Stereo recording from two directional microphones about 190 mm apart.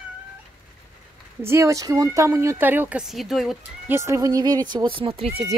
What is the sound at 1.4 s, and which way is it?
Speech, 15° right (ahead or behind).